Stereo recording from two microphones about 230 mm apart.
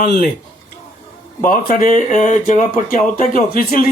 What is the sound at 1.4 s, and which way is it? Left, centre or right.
Speech, left.